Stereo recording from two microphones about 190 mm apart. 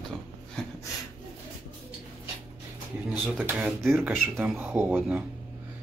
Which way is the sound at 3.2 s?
10° right (ahead or behind).